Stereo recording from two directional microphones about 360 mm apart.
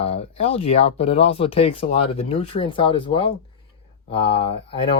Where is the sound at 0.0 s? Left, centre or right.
Centre.